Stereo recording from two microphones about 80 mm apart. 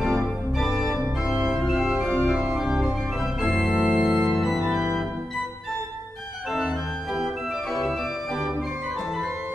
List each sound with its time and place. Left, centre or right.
0.0 s organ: centre